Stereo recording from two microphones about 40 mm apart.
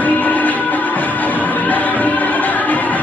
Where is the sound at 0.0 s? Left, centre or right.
Left.